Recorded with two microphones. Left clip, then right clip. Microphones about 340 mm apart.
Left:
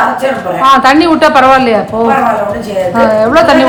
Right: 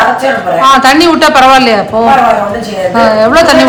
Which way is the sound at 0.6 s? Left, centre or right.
Centre.